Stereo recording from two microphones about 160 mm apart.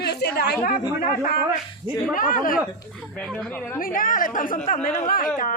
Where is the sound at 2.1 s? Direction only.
60° left (ahead or behind).